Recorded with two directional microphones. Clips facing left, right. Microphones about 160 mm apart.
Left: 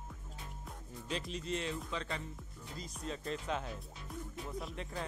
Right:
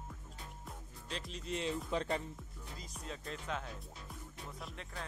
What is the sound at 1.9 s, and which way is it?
Speech, 45° right (ahead or behind).